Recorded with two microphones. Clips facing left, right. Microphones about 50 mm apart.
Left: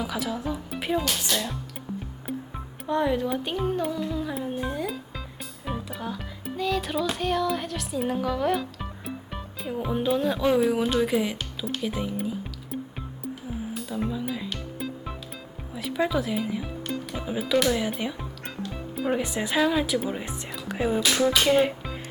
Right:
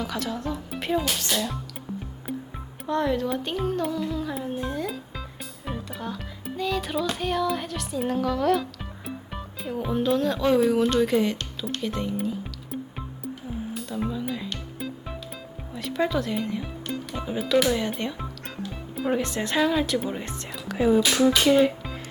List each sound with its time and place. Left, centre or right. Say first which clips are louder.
0.0 s speech: even; centre
2.3 s music: even; centre
2.8 s speech: even; centre
5.6 s music: left 1 dB; centre
9.8 s speech: right 1 dB; centre
13.7 s music: even; centre
15.7 s speech: even; centre
20.7 s music: right 5 dB; centre
21.0 s speech: right 2 dB; centre
21.4 s speech: right 2 dB; centre